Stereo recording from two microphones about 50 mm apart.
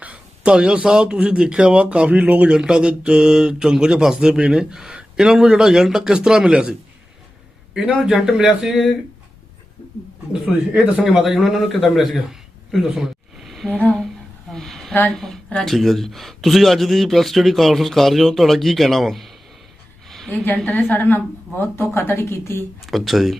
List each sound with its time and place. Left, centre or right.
0.0 s a sound: right
0.5 s speech: centre
2.5 s speech: centre
8.0 s speech: centre
11.0 s a man's voice: centre
14.5 s a sound: centre
15.0 s speech: centre
20.1 s a sound: centre
20.3 s a woman's voice: left
21.6 s speech: left
22.9 s speech: centre